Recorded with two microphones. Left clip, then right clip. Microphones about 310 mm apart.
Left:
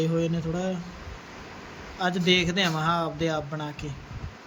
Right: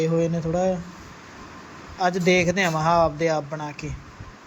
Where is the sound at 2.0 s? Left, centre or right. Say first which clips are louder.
Right 4 dB; centre.